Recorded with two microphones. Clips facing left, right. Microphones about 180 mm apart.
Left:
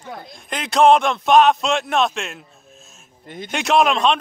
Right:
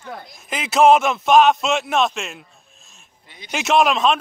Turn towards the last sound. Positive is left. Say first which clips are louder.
# even
turn(degrees=0)  # may be behind; listen again after turning